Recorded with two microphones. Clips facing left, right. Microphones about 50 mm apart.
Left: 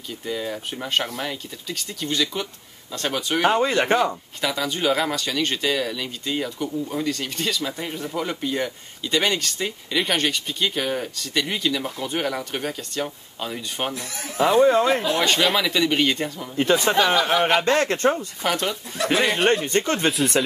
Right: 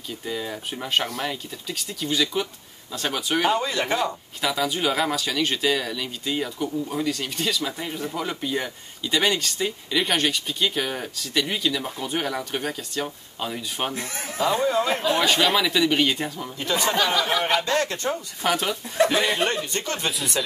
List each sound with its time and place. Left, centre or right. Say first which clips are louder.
0.2 s speech: left 3 dB; centre
3.4 s speech: left 7 dB; left
4.4 s speech: even; centre
13.9 s speech: right 1 dB; right
14.3 s speech: left 6 dB; left
15.1 s speech: even; centre
16.5 s speech: left 5 dB; left
18.4 s speech: right 2 dB; centre
19.0 s speech: left 8 dB; left